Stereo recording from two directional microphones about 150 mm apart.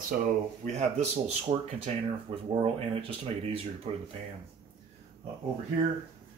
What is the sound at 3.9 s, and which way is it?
Speech, 35° right (ahead or behind).